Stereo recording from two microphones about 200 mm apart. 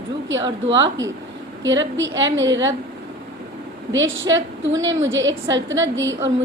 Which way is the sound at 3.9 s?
70° right (ahead or behind).